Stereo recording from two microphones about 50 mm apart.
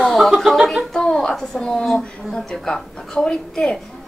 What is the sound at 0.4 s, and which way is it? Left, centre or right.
Music, centre.